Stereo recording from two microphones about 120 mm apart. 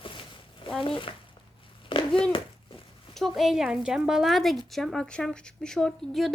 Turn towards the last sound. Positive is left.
turn(degrees=5)  # may be behind; listen again after turning